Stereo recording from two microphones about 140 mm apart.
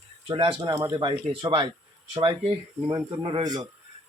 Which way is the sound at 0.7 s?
25° right (ahead or behind).